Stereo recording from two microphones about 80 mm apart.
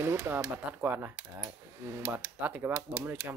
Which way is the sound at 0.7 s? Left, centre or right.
Right.